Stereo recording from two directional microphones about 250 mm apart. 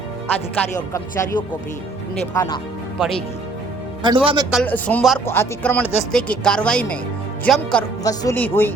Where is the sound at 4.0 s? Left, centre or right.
Centre.